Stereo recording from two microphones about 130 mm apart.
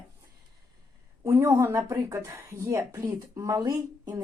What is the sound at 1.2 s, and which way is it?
Speech, 20° right (ahead or behind).